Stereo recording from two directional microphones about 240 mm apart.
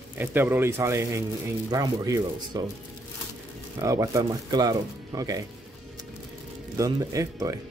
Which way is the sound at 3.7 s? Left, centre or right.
Centre.